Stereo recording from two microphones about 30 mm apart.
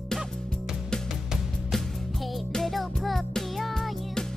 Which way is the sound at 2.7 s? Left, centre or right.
Centre.